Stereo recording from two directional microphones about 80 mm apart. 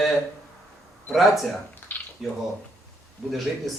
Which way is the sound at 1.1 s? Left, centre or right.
Centre.